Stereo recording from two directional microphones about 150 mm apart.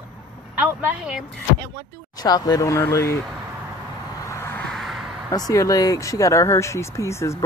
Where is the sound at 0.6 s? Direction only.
5° right (ahead or behind).